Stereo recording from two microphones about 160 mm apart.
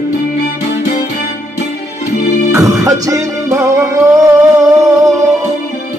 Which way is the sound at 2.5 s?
20° right (ahead or behind).